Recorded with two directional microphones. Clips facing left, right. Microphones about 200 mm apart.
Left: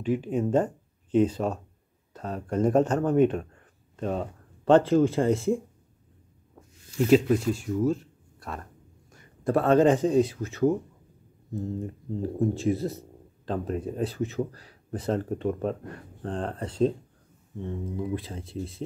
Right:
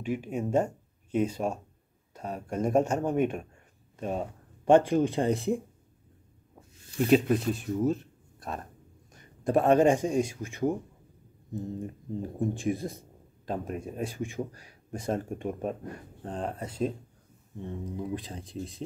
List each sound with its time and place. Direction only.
0.0 s speech: 10° right (ahead or behind)
7.1 s speech: 20° right (ahead or behind)
18.1 s speech: 15° right (ahead or behind)